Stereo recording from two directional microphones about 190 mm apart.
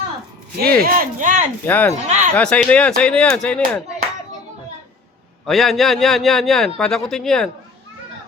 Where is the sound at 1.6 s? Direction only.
10° left (ahead or behind).